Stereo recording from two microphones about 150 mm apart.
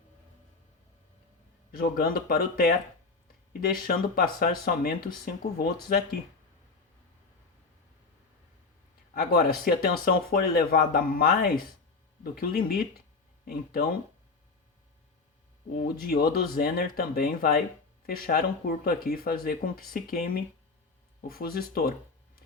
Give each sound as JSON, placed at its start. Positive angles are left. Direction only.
{"t": 1.7, "sound": "speech", "side_deg": 80}
{"t": 9.1, "sound": "speech", "side_deg": 85}
{"t": 15.8, "sound": "speech", "side_deg": 90}
{"t": 16.3, "sound": "speech", "side_deg": 80}